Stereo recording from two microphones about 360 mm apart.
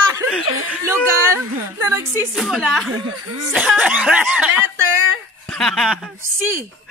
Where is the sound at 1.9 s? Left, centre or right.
Centre.